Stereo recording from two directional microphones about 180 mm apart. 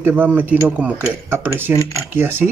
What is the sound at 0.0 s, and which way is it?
Speech, 10° right (ahead or behind).